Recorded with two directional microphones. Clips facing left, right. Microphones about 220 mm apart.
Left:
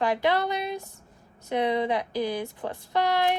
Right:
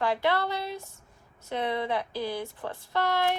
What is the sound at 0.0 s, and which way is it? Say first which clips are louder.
Speech: left 2 dB; 15° left (ahead or behind).